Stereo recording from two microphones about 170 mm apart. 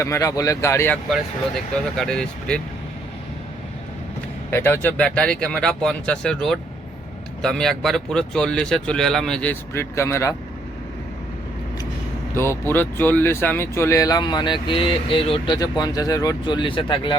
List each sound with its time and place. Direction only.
0.0 s speech: 20° left (ahead or behind)
1.1 s speech: centre (ahead or behind)
4.5 s speech: 15° left (ahead or behind)
12.4 s speech: 15° left (ahead or behind)